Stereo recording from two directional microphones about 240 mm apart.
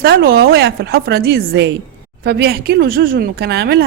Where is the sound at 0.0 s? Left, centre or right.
Right.